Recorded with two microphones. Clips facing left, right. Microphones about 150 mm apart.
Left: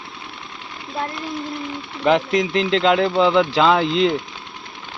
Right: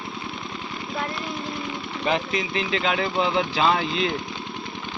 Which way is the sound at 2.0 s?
70° left (ahead or behind).